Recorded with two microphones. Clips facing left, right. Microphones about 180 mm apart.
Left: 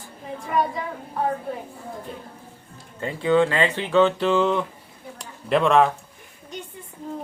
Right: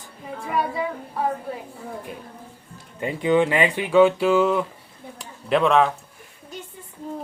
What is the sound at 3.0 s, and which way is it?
Speech, 15° right (ahead or behind).